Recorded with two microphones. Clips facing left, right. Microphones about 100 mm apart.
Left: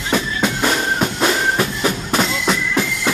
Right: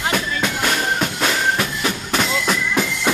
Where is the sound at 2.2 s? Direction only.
Centre (ahead or behind).